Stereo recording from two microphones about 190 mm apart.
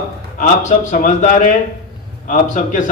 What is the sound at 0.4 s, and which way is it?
A man's voice, 40° left (ahead or behind).